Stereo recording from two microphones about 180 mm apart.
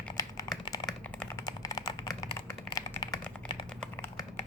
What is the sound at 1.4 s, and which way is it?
Typing, 20° left (ahead or behind).